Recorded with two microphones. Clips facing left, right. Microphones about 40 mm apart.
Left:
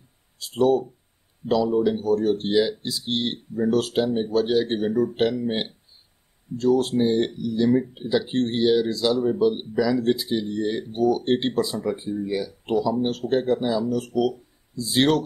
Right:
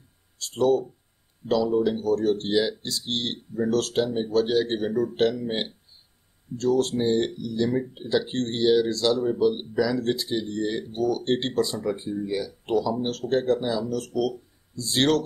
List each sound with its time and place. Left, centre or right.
0.4 s speech: centre